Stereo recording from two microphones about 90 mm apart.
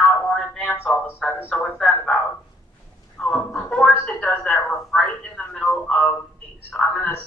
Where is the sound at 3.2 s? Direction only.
5° left (ahead or behind).